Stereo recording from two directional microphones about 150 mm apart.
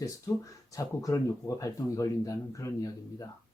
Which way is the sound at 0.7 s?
20° left (ahead or behind).